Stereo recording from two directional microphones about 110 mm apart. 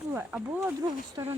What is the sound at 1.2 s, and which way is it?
Speech, 30° right (ahead or behind).